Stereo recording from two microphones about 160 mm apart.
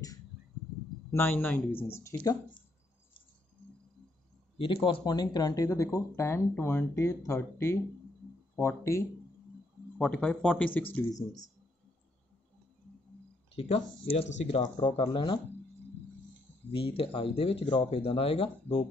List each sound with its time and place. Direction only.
1.1 s speech: 10° left (ahead or behind)
4.6 s speech: 35° left (ahead or behind); by 9.0 s 15° left (ahead or behind)
9.9 s speech: 5° left (ahead or behind)
11.1 s speech: 20° left (ahead or behind)
13.6 s speech: 35° left (ahead or behind)
14.8 s speech: 35° left (ahead or behind)
16.7 s speech: 35° left (ahead or behind)